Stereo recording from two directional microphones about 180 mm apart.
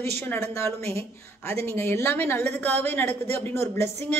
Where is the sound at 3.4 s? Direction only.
15° left (ahead or behind).